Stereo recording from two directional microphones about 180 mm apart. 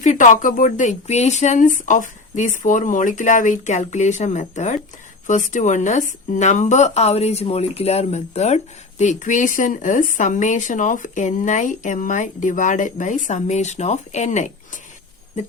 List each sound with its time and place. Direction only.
0.0 s speech: 45° left (ahead or behind)